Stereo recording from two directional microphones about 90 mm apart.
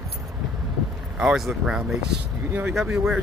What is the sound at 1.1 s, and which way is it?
Speech, 5° right (ahead or behind).